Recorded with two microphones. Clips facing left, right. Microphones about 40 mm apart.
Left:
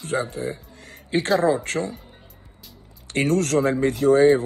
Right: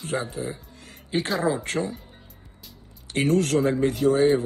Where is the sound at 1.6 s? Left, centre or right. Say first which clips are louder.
Left 1 dB; left.